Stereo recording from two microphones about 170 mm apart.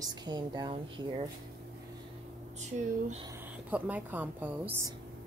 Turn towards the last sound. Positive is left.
turn(degrees=-10)  # may be behind; listen again after turning